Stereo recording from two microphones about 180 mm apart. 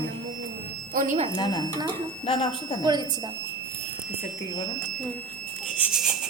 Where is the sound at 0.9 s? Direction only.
45° right (ahead or behind).